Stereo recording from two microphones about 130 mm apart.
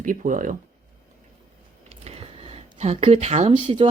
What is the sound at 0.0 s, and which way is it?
Speech, 90° right.